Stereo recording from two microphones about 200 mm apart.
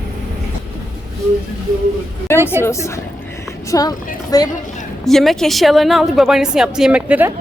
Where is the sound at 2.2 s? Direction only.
10° left (ahead or behind).